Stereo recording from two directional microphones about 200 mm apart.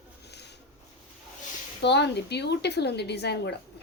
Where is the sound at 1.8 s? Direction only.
60° left (ahead or behind).